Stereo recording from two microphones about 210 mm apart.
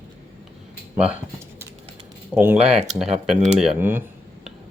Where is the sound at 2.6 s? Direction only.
30° right (ahead or behind).